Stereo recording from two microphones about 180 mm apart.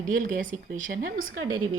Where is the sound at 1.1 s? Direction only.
90° right.